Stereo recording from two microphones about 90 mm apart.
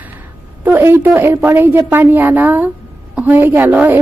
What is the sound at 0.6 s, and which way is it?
A woman's voice, 25° right (ahead or behind).